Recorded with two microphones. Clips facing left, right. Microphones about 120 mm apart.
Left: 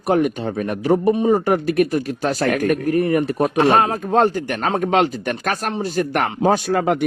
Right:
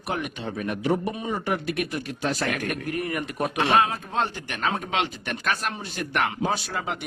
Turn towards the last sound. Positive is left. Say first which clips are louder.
# left 13 dB
turn(degrees=55)  # may be behind; listen again after turning